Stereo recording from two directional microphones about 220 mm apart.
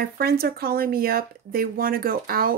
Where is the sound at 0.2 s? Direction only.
45° right (ahead or behind).